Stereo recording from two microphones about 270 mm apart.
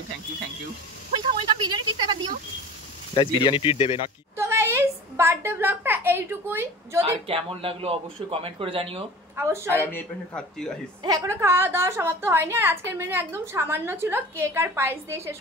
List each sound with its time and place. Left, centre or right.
1.3 s a woman's voice: centre
3.2 s speech: centre
4.4 s a woman's voice: centre
7.0 s a man's voice: right
9.7 s a man's voice: centre
11.1 s a woman's voice: centre